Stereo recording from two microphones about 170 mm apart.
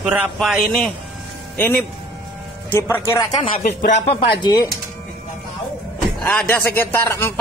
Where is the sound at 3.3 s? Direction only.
30° left (ahead or behind).